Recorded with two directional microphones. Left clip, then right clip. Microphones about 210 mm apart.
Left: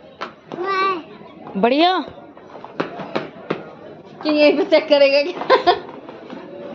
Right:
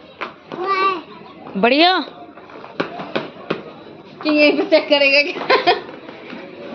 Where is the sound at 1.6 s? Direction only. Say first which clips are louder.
Right 2 dB; 10° left (ahead or behind).